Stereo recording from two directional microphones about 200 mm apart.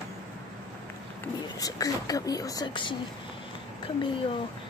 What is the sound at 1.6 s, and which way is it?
Speech, 20° left (ahead or behind).